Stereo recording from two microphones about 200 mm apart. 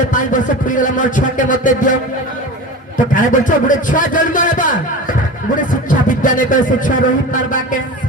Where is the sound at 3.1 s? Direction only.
40° left (ahead or behind).